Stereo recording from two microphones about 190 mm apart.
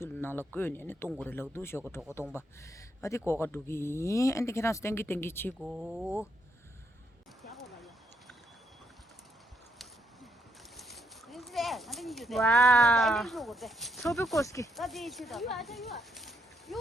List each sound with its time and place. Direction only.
0.0 s speech: 10° left (ahead or behind)
5.5 s speech: 5° right (ahead or behind)
7.5 s a sound: centre (ahead or behind)
10.8 s speech: centre (ahead or behind)
14.3 s speech: 15° left (ahead or behind)
14.8 s speech: centre (ahead or behind)